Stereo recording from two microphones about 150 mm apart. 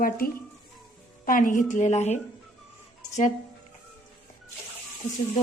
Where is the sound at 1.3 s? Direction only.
65° left (ahead or behind).